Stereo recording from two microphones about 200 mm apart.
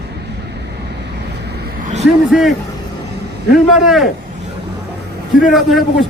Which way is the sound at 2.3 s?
Centre (ahead or behind).